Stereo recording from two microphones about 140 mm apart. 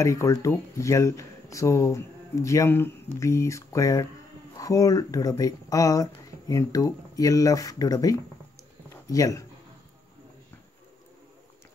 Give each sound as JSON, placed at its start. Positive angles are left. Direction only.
{"t": 0.0, "sound": "speech", "side_deg": 20}